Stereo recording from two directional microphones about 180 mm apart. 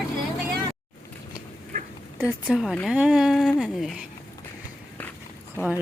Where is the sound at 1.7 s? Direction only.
50° right (ahead or behind).